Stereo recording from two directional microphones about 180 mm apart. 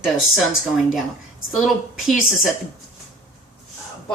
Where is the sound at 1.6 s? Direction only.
Centre (ahead or behind).